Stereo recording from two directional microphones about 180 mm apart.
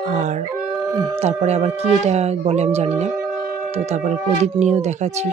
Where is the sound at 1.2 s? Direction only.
35° right (ahead or behind).